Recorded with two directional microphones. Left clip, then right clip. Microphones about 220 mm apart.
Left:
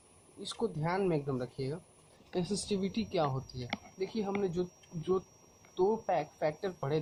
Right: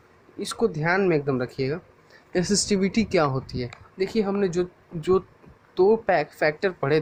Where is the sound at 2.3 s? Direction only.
40° right (ahead or behind).